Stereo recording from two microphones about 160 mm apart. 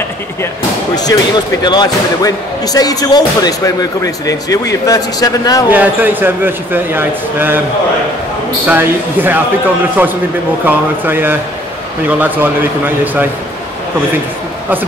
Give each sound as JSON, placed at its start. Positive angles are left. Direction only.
{"t": 0.9, "sound": "speech", "side_deg": 25}
{"t": 5.7, "sound": "speech", "side_deg": -10}
{"t": 8.6, "sound": "speech", "side_deg": -10}
{"t": 10.6, "sound": "speech", "side_deg": -10}